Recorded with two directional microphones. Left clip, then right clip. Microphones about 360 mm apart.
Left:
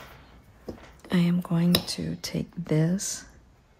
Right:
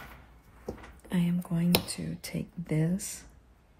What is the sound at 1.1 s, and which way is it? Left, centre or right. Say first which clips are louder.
Speech: left 6 dB; centre.